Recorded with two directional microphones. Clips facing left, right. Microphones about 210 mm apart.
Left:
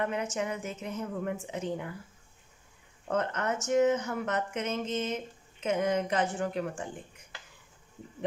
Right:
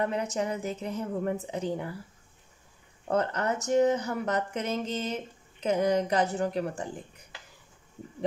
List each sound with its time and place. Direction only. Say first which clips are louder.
0.0 s speech: right 2 dB; 35° right (ahead or behind)
3.1 s speech: right 3 dB; 35° right (ahead or behind)